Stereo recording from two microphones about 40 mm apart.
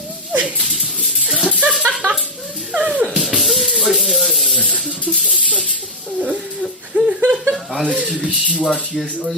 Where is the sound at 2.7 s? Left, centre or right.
Right.